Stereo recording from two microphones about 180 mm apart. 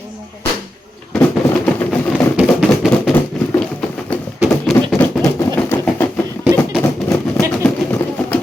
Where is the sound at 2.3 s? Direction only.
Centre (ahead or behind).